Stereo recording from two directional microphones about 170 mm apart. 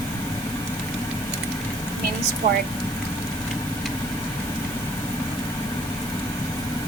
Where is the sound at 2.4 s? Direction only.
35° right (ahead or behind).